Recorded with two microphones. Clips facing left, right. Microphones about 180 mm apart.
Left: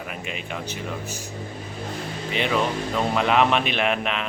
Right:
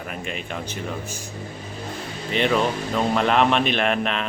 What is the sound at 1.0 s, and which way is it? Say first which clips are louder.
Speech: left 1 dB; 50° right (ahead or behind).